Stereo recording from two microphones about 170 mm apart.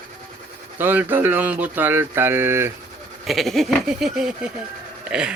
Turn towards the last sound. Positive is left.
turn(degrees=-5)  # may be behind; listen again after turning